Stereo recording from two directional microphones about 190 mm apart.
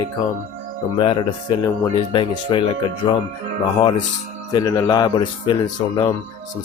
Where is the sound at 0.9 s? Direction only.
25° left (ahead or behind).